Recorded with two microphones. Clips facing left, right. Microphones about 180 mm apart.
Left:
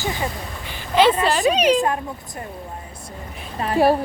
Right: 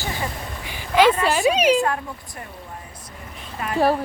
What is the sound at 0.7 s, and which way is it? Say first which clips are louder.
Speech: even; 10° right (ahead or behind).